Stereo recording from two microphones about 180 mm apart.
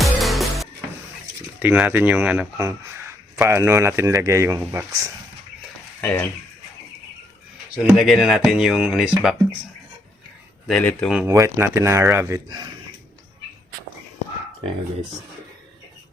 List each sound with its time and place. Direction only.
0.0 s music: centre (ahead or behind)
1.5 s speech: 5° right (ahead or behind)
2.6 s a sound: 15° right (ahead or behind)
3.5 s speech: 15° right (ahead or behind)
6.0 s speech: 10° left (ahead or behind)
7.8 s speech: centre (ahead or behind)
10.7 s speech: 5° left (ahead or behind)
11.2 s speech: 15° right (ahead or behind)